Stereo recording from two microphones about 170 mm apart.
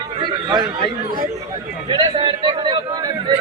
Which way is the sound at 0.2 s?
25° right (ahead or behind).